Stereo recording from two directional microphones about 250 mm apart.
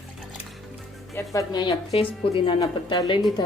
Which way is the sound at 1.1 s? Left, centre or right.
Centre.